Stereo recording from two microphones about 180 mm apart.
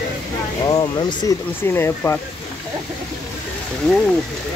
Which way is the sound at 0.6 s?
25° left (ahead or behind).